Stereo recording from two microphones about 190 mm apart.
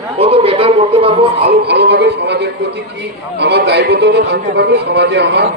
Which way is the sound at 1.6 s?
60° right (ahead or behind).